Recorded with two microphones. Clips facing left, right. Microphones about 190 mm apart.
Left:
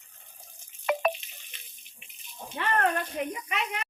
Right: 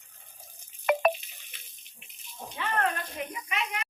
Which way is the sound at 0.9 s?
55° right (ahead or behind).